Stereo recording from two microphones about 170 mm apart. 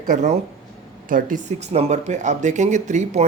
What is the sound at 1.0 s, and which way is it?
Speech, 55° right (ahead or behind).